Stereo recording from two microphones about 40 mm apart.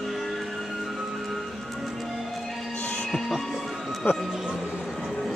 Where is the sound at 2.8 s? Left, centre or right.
Left.